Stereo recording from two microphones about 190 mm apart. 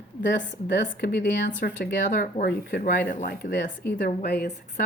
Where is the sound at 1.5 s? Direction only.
55° left (ahead or behind).